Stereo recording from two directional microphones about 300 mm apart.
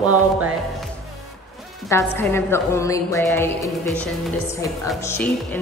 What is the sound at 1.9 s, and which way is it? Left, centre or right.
A woman's voice, centre.